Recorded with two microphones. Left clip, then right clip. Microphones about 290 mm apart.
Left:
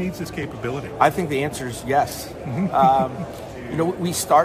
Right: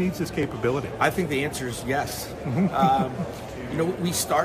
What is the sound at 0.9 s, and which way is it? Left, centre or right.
Speech, centre.